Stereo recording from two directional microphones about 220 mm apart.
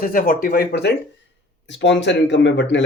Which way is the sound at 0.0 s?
40° left (ahead or behind).